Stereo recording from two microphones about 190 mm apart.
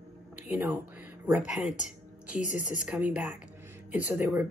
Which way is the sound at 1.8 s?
5° right (ahead or behind).